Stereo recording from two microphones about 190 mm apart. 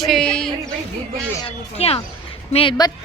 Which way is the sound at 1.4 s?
30° left (ahead or behind).